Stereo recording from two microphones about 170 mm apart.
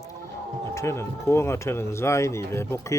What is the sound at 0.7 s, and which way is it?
Speech, 15° left (ahead or behind).